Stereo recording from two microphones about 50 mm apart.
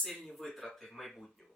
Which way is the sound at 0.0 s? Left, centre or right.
Centre.